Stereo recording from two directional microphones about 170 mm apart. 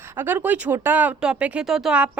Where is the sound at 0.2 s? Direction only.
10° right (ahead or behind).